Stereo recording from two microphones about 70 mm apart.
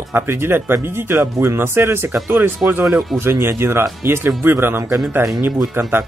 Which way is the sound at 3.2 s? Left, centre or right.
Right.